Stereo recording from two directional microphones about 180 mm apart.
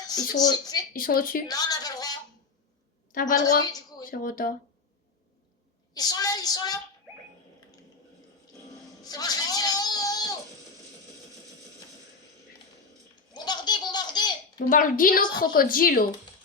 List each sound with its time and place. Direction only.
0.1 s speech: 20° left (ahead or behind)
0.9 s a woman's voice: 50° left (ahead or behind)
1.5 s a sound: 20° left (ahead or behind)
3.1 s a woman's voice: 50° left (ahead or behind)
3.7 s a woman's voice: 20° left (ahead or behind)
4.1 s a woman's voice: 50° left (ahead or behind)
5.9 s a woman's voice: 20° left (ahead or behind)
9.0 s a sound: 20° left (ahead or behind)
13.3 s laughter: 25° left (ahead or behind)
14.7 s a woman's voice: 50° left (ahead or behind)